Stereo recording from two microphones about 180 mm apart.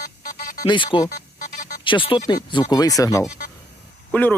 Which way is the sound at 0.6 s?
25° left (ahead or behind).